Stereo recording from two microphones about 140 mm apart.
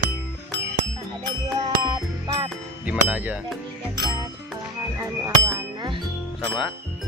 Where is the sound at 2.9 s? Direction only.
10° right (ahead or behind).